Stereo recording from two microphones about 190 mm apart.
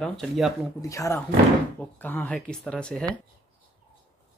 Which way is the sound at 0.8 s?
15° left (ahead or behind).